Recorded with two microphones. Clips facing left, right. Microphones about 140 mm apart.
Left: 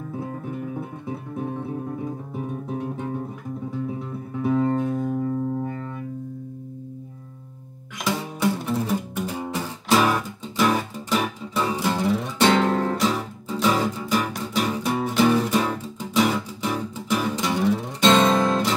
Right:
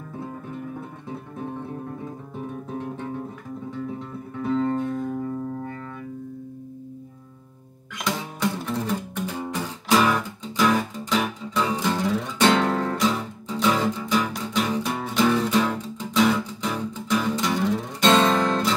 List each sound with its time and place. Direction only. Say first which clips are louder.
0.7 s music: left 3 dB; 10° left (ahead or behind)
2.0 s guitar: left 4 dB; 10° left (ahead or behind)
4.4 s music: left 2 dB; 10° left (ahead or behind)
8.0 s music: left 2 dB; 5° left (ahead or behind)
18.1 s guitar: left 1 dB; 15° left (ahead or behind)